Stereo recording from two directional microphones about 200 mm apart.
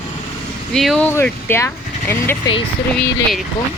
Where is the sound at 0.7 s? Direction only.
Centre (ahead or behind).